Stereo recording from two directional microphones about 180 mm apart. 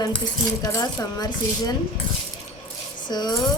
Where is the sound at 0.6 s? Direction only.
20° left (ahead or behind).